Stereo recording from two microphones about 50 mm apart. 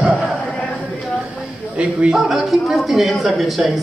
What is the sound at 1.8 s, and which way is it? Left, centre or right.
Speech, right.